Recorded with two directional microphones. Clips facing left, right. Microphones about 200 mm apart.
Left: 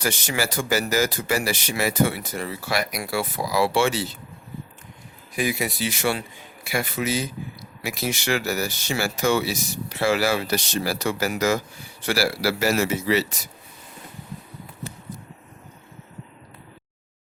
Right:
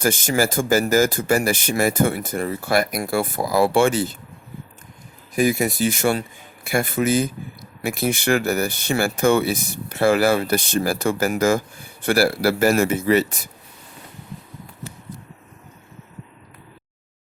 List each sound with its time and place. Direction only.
0.0 s speech: 50° right (ahead or behind)
5.3 s speech: 45° right (ahead or behind)